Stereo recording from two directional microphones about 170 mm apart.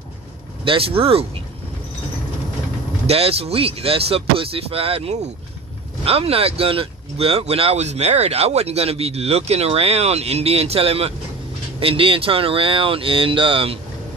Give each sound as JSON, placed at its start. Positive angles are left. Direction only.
{"t": 0.7, "sound": "speech", "side_deg": -35}
{"t": 3.1, "sound": "speech", "side_deg": -35}